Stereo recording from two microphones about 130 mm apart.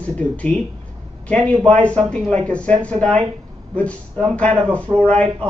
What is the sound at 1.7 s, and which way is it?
Speech, 10° left (ahead or behind).